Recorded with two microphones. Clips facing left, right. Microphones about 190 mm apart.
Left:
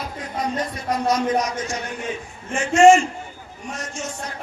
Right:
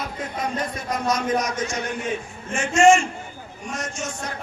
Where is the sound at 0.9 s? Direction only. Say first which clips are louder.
Left 3 dB; 35° left (ahead or behind).